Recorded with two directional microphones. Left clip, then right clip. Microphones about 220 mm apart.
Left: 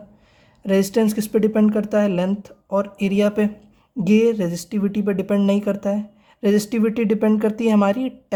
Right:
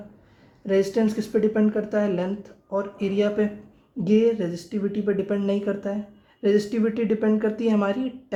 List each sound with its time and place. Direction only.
0.7 s speech: 40° left (ahead or behind)